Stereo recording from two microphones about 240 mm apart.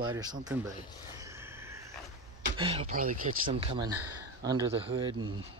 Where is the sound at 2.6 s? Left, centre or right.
Right.